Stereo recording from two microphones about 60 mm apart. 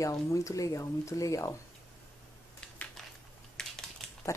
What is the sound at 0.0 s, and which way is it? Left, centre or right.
A woman's voice, left.